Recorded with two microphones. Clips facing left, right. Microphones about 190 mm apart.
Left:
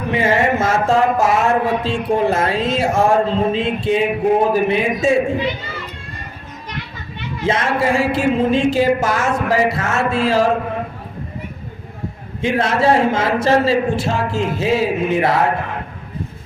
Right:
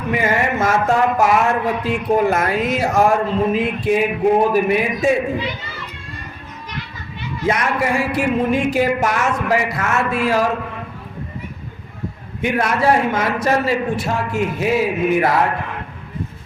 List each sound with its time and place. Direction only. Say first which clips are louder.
0.1 s speech: left 3 dB; 25° left (ahead or behind)
7.4 s speech: left 2 dB; 25° left (ahead or behind)
12.4 s speech: left 2 dB; 25° left (ahead or behind)